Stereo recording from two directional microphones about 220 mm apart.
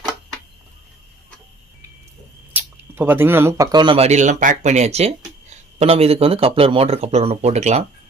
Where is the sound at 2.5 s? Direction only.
10° right (ahead or behind); by 7.8 s 30° right (ahead or behind).